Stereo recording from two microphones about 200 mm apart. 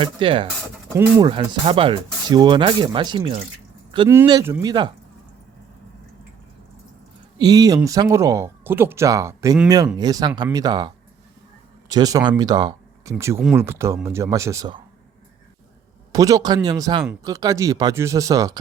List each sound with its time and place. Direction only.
0.0 s speech: 25° right (ahead or behind)
0.9 s speech: 10° right (ahead or behind)
1.3 s speech: 25° right (ahead or behind)
7.3 s speech: 20° right (ahead or behind)
16.1 s speech: 15° right (ahead or behind)